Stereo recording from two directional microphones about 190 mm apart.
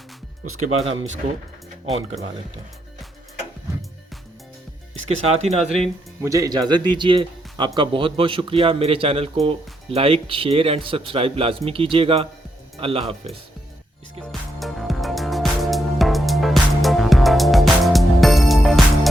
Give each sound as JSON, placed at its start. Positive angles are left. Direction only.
{"t": 0.6, "sound": "speech", "side_deg": -40}
{"t": 5.0, "sound": "speech", "side_deg": -35}
{"t": 6.2, "sound": "a man's voice", "side_deg": -20}
{"t": 14.6, "sound": "music", "side_deg": 0}